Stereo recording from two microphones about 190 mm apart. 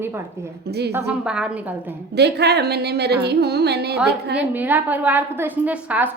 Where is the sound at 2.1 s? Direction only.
60° right (ahead or behind).